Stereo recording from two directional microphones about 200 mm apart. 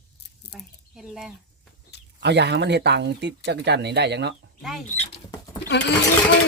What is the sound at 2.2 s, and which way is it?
Speech, 60° right (ahead or behind).